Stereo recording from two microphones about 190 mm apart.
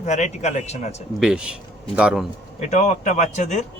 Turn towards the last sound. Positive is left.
turn(degrees=40)  # may be behind; listen again after turning